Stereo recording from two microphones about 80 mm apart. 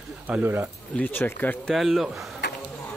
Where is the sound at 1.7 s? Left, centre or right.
Centre.